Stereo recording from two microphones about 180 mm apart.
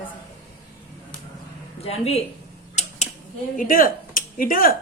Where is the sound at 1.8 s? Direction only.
35° left (ahead or behind).